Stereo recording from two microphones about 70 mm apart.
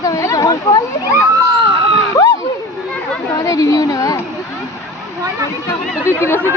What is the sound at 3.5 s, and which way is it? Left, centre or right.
Speech, left.